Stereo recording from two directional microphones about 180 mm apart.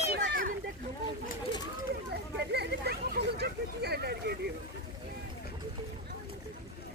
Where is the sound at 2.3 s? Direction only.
65° right (ahead or behind).